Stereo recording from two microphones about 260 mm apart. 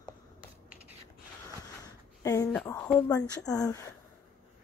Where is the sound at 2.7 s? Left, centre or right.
Centre.